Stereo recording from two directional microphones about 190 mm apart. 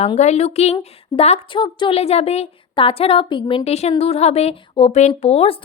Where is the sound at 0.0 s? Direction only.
35° left (ahead or behind).